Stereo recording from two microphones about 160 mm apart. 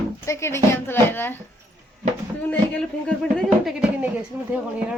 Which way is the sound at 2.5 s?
5° left (ahead or behind).